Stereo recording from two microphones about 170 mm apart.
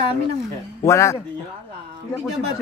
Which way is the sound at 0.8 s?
15° left (ahead or behind).